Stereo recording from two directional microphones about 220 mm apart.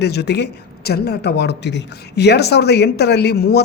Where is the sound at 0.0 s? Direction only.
50° left (ahead or behind).